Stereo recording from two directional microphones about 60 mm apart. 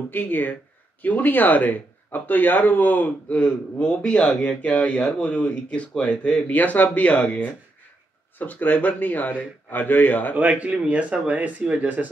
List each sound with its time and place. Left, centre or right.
0.1 s speech: left
10.3 s speech: right